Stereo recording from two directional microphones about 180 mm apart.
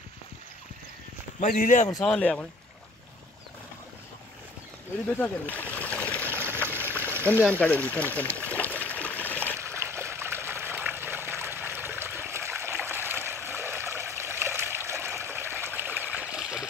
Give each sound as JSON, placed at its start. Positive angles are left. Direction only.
{"t": 1.4, "sound": "speech", "side_deg": 45}
{"t": 2.0, "sound": "speech", "side_deg": 5}
{"t": 5.2, "sound": "splash", "side_deg": 10}
{"t": 6.3, "sound": "stream", "side_deg": -10}
{"t": 6.9, "sound": "a sound", "side_deg": 10}
{"t": 9.6, "sound": "trickle", "side_deg": -15}